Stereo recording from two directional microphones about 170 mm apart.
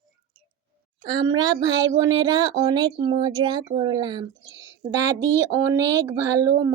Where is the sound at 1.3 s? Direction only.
20° right (ahead or behind).